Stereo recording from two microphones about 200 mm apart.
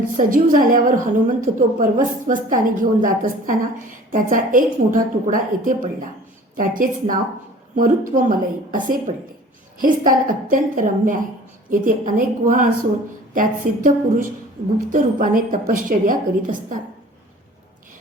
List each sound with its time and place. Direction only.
0.2 s a woman's voice: 45° right (ahead or behind)